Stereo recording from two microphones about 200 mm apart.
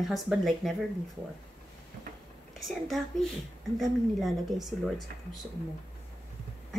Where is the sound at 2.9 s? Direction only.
Centre (ahead or behind).